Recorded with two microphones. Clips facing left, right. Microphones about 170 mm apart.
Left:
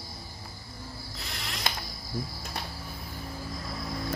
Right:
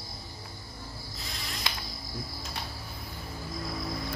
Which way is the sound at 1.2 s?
70° left (ahead or behind).